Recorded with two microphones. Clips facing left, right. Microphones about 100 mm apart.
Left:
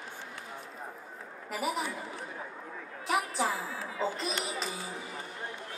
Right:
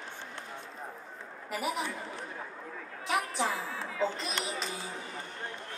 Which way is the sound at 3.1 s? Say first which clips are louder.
Left 1 dB; 5° left (ahead or behind).